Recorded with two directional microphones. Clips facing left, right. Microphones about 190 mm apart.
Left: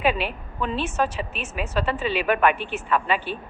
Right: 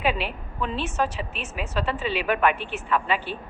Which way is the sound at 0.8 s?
50° left (ahead or behind).